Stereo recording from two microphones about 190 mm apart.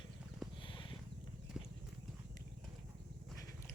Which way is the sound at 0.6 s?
25° left (ahead or behind).